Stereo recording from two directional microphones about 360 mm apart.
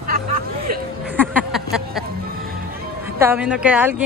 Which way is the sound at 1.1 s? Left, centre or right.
Centre.